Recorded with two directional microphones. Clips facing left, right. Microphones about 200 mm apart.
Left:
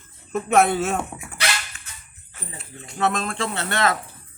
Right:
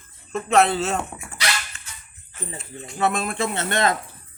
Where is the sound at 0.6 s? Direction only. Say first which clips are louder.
Left 1 dB; 15° left (ahead or behind).